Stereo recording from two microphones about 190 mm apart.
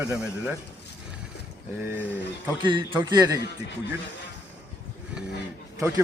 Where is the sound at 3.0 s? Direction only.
20° right (ahead or behind).